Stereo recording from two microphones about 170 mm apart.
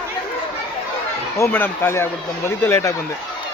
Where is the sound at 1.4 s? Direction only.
10° left (ahead or behind).